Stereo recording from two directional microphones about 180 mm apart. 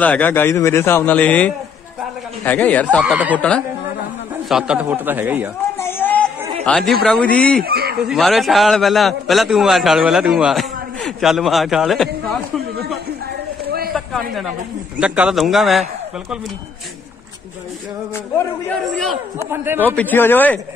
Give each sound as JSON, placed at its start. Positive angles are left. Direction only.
{"t": 0.0, "sound": "a man's voice", "side_deg": 10}
{"t": 5.8, "sound": "a sound", "side_deg": 10}
{"t": 6.6, "sound": "a man's voice", "side_deg": 0}
{"t": 7.6, "sound": "speech", "side_deg": -60}
{"t": 8.0, "sound": "a man's voice", "side_deg": 0}
{"t": 13.7, "sound": "a sound", "side_deg": -55}
{"t": 13.9, "sound": "a man's voice", "side_deg": 0}
{"t": 18.7, "sound": "a man's voice", "side_deg": 0}
{"t": 19.3, "sound": "speech", "side_deg": -15}
{"t": 20.0, "sound": "a man's voice", "side_deg": 10}